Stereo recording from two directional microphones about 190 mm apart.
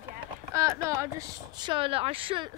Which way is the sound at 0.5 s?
15° right (ahead or behind).